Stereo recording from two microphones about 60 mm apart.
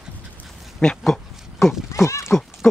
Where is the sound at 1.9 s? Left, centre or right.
Left.